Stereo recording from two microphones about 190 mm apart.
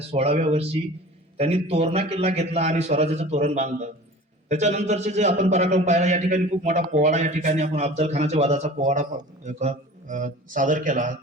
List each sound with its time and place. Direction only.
0.1 s a man's voice: 35° right (ahead or behind)